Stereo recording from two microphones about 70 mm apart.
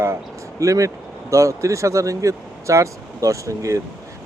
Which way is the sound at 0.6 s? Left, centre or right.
Right.